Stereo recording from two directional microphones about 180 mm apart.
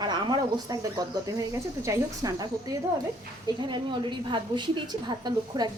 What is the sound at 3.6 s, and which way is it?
Speech, 25° right (ahead or behind).